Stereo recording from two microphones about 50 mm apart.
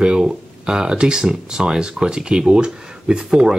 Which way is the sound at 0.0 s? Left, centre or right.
Centre.